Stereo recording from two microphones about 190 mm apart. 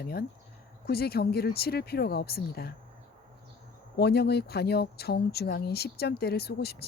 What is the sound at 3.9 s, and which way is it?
A woman's voice, 60° left (ahead or behind).